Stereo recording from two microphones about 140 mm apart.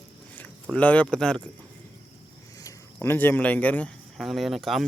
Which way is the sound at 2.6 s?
15° left (ahead or behind).